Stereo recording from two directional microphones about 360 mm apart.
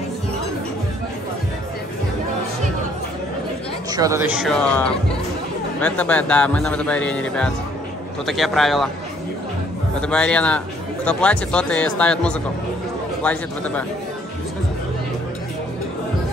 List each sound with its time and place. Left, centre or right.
3.9 s speech: centre
4.3 s speech: centre
10.0 s speech: centre